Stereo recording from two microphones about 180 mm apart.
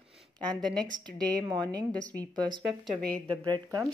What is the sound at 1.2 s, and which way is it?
Speech, 20° right (ahead or behind).